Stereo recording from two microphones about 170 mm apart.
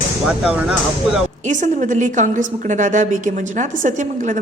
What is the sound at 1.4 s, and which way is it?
A woman's voice, 45° right (ahead or behind).